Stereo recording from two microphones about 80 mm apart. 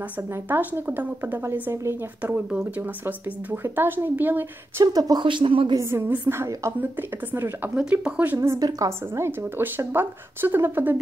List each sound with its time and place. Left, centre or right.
0.3 s speech: right
4.8 s a woman's voice: right
5.2 s speech: right
5.8 s a woman's voice: right
7.7 s speech: centre
8.4 s a woman's voice: right
9.1 s speech: right